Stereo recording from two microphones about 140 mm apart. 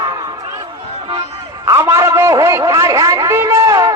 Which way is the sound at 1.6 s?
20° right (ahead or behind).